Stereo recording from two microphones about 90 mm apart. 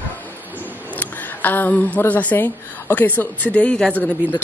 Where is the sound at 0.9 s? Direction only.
20° left (ahead or behind).